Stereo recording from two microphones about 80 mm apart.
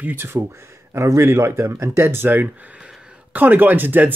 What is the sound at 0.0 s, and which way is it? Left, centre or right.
Speech, right.